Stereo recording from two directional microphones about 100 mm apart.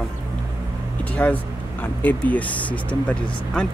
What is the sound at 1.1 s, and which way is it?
Speech, 15° left (ahead or behind).